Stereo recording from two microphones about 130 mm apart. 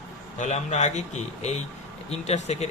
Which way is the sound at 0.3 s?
65° left (ahead or behind).